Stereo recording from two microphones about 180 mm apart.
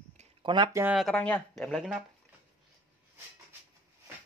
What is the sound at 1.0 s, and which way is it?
Speech, 5° left (ahead or behind).